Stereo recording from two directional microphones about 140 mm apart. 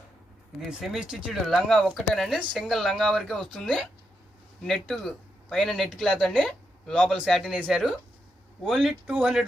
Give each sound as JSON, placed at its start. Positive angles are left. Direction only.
{"t": 0.8, "sound": "speech", "side_deg": -5}